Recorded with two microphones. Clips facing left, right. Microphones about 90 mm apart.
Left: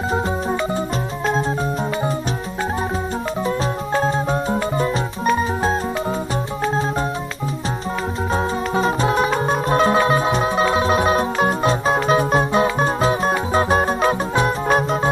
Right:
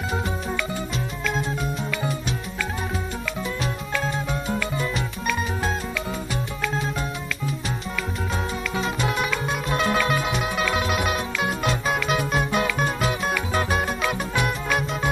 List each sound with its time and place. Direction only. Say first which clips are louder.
0.1 s organ: left 7 dB; 35° left (ahead or behind)
3.4 s music: left 7 dB; 35° left (ahead or behind)
6.6 s organ: left 7 dB; 35° left (ahead or behind)
8.3 s music: left 7 dB; 35° left (ahead or behind)